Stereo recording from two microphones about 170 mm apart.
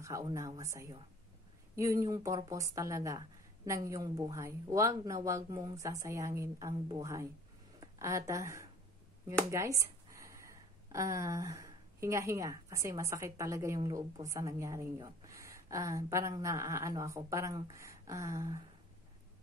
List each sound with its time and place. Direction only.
0.3 s a woman's voice: 20° right (ahead or behind)